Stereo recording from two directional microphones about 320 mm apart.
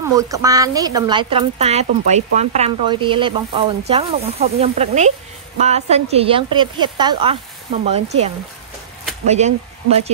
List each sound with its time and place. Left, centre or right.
0.1 s a woman's voice: centre
9.3 s speech: centre